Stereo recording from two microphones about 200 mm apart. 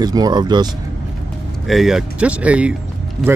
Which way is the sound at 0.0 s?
20° right (ahead or behind).